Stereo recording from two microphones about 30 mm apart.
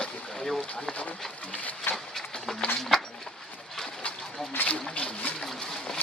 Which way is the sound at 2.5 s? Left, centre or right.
Centre.